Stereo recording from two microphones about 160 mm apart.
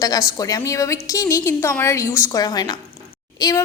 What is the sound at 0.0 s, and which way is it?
A woman's voice, 20° left (ahead or behind).